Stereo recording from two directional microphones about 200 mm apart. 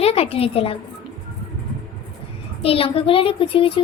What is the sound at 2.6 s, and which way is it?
A woman's voice, 30° left (ahead or behind).